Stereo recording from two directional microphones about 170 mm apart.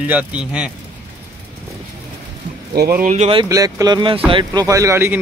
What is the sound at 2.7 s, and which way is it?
Speech, 65° right (ahead or behind).